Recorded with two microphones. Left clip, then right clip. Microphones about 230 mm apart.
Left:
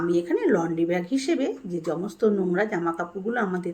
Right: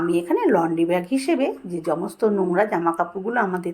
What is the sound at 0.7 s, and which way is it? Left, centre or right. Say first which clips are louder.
Speech: right 4 dB; right.